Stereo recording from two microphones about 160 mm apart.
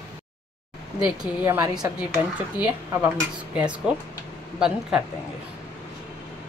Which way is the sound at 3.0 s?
5° right (ahead or behind).